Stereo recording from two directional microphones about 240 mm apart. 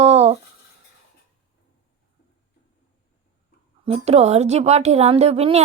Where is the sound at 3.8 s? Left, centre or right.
Right.